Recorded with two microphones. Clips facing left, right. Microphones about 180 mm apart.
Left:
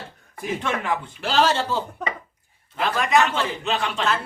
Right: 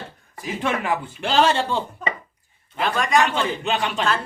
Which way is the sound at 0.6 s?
10° right (ahead or behind).